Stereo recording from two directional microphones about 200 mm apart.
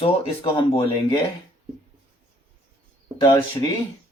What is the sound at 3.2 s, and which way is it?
Speech, 20° left (ahead or behind).